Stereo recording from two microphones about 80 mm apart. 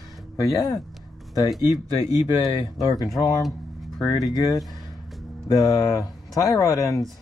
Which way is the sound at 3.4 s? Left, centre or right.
Centre.